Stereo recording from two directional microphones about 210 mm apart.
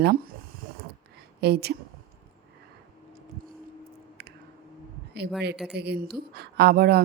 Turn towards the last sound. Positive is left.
turn(degrees=-50)  # may be behind; listen again after turning